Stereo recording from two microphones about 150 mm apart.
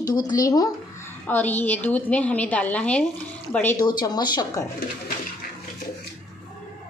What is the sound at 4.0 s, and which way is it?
Speech, 30° left (ahead or behind).